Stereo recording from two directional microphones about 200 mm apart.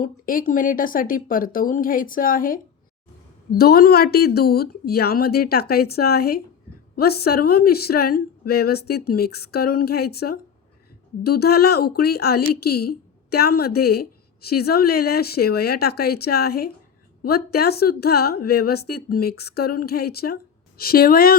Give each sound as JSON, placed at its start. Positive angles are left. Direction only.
{"t": 0.0, "sound": "speech", "side_deg": 45}